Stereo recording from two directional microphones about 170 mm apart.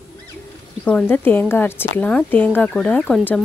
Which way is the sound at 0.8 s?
10° left (ahead or behind).